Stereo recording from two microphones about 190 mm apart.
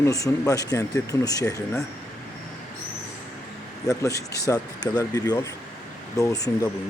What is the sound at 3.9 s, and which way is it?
Speech, 15° left (ahead or behind).